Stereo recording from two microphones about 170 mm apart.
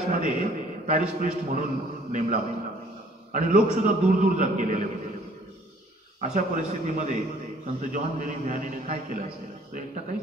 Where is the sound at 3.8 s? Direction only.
50° right (ahead or behind).